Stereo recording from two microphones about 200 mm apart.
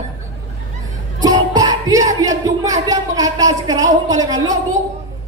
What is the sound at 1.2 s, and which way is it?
Music, 20° right (ahead or behind).